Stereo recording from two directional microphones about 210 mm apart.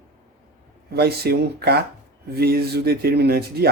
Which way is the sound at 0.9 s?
50° right (ahead or behind).